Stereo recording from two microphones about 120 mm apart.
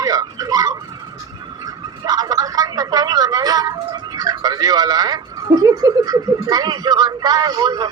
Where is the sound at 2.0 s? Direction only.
35° right (ahead or behind).